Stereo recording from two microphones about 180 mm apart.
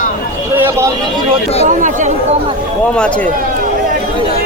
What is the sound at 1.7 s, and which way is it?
Speech, 45° right (ahead or behind).